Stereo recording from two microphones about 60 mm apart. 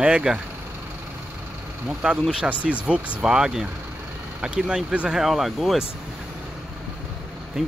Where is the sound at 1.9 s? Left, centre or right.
Right.